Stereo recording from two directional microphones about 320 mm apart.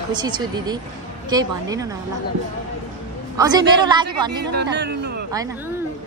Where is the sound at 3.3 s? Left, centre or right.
Centre.